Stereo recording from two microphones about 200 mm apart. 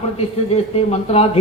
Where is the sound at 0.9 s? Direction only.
30° left (ahead or behind).